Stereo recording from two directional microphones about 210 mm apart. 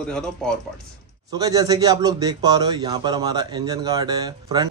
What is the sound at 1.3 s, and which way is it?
A man's voice, 15° right (ahead or behind).